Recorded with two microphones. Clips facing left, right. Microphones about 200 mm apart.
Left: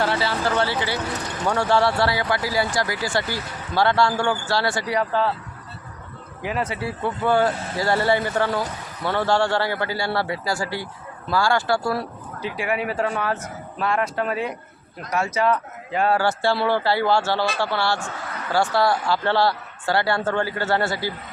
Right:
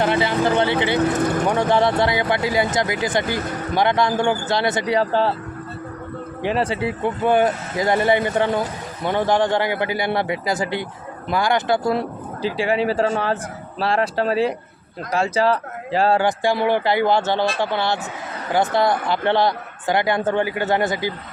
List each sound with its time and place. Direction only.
0.0 s speech: 20° right (ahead or behind)
1.1 s speech: 55° right (ahead or behind)
1.5 s speech: 20° right (ahead or behind)
6.4 s speech: 30° right (ahead or behind)
16.2 s speech: 15° right (ahead or behind)